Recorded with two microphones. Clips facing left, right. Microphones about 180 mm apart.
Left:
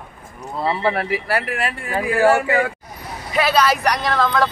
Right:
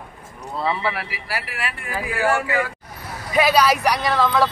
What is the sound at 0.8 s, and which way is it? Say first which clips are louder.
Speech: left 7 dB; 50° left (ahead or behind).